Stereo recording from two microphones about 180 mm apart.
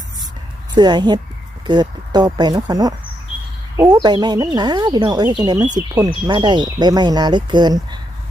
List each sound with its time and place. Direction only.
0.7 s speech: 25° right (ahead or behind)